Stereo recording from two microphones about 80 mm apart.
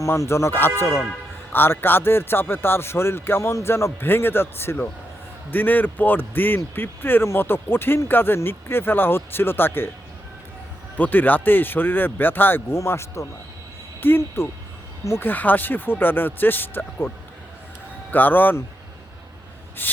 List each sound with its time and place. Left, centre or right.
0.0 s speech: left
10.9 s speech: left
12.7 s speech: left
18.1 s speech: left
19.8 s speech: left